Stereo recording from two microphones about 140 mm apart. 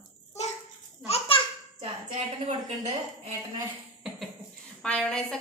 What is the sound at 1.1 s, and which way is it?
Speech, 40° left (ahead or behind).